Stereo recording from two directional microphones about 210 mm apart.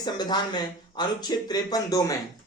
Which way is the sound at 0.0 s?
20° left (ahead or behind).